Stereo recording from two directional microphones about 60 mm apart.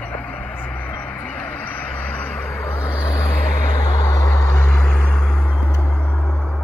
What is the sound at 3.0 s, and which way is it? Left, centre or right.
Vehicle, left.